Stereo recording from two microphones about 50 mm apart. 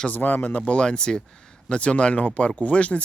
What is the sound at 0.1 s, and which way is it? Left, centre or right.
Speech, left.